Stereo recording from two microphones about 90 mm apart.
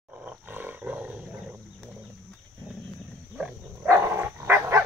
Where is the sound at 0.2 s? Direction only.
15° right (ahead or behind).